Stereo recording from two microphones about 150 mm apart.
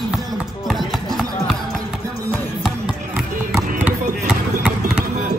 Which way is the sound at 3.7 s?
10° right (ahead or behind).